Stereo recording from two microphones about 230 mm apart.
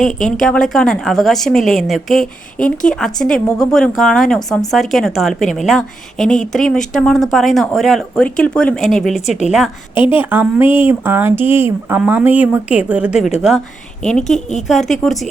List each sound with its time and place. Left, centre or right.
0.3 s speech: centre
9.9 s a woman's voice: left
10.2 s speech: centre